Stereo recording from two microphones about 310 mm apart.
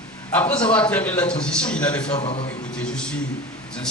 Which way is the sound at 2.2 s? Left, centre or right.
Centre.